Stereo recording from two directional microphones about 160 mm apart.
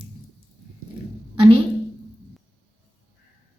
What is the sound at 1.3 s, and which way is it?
Speech, 30° right (ahead or behind).